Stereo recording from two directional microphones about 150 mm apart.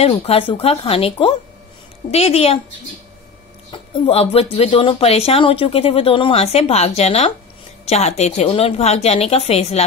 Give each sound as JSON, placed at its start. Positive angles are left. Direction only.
{"t": 0.0, "sound": "a woman's voice", "side_deg": 40}
{"t": 3.7, "sound": "a woman's voice", "side_deg": 35}